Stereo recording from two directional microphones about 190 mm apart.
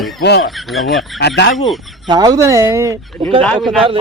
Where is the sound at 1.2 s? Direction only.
65° left (ahead or behind).